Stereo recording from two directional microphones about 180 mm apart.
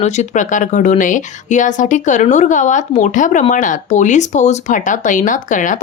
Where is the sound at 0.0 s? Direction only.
40° left (ahead or behind).